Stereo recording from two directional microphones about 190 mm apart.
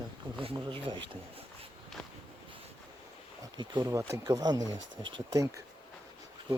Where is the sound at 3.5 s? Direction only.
20° right (ahead or behind).